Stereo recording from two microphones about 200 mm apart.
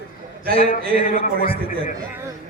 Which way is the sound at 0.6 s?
45° left (ahead or behind).